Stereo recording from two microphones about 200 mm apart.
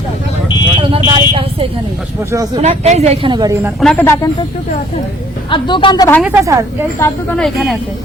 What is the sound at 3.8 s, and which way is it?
Speech, 5° left (ahead or behind).